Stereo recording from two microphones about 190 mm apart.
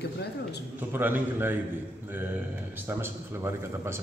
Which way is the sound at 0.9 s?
10° right (ahead or behind).